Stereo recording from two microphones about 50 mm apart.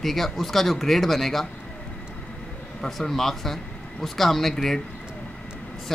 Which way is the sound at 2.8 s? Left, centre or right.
Centre.